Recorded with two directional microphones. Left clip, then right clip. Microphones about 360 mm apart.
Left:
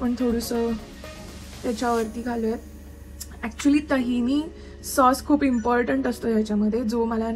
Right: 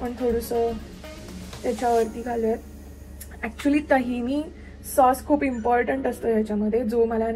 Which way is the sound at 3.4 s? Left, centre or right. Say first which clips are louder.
Left 1 dB; centre.